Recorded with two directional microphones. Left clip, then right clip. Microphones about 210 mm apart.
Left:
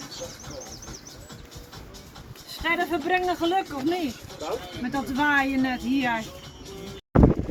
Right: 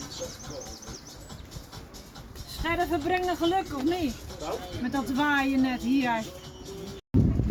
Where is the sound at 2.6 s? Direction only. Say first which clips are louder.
Left 2 dB; 55° right (ahead or behind).